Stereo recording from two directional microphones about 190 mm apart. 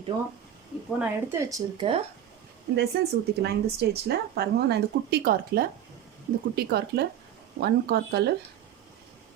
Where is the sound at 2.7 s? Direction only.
60° right (ahead or behind).